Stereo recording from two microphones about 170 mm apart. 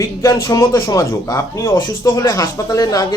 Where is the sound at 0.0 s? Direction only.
20° left (ahead or behind).